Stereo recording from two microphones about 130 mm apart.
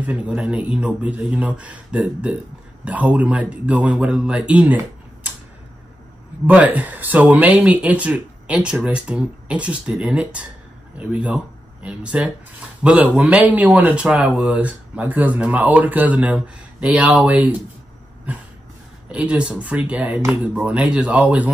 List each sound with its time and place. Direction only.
0.0 s speech: 10° right (ahead or behind)
6.4 s speech: 10° right (ahead or behind)
19.1 s speech: 10° right (ahead or behind)